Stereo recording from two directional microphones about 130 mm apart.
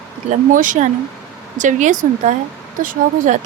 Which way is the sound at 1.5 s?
75° right (ahead or behind).